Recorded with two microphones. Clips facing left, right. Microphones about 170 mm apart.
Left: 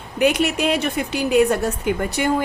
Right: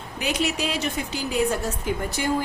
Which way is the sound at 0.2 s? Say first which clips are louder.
Left 8 dB; 55° left (ahead or behind).